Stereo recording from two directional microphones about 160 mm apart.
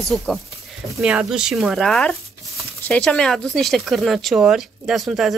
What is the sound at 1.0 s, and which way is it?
Speech, 5° right (ahead or behind).